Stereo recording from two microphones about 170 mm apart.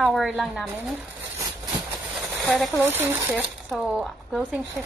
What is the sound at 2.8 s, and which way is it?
Speech, 10° right (ahead or behind).